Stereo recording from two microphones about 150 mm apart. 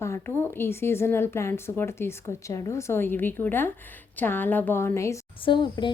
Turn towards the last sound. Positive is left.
turn(degrees=30)  # may be behind; listen again after turning